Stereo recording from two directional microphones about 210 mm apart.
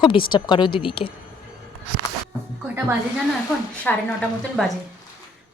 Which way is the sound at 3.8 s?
Centre (ahead or behind).